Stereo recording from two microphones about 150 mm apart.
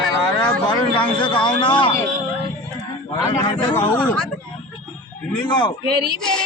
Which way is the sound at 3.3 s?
35° left (ahead or behind).